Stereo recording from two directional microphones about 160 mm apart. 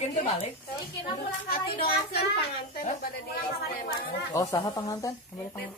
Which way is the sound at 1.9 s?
75° left (ahead or behind).